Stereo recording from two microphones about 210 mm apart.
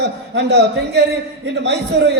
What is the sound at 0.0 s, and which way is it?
A man's voice, 55° right (ahead or behind).